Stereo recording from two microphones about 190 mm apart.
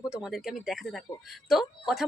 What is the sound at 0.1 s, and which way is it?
Speech, 5° right (ahead or behind).